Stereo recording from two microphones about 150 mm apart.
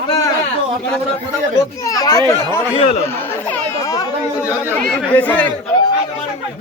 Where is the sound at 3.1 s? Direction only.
15° left (ahead or behind).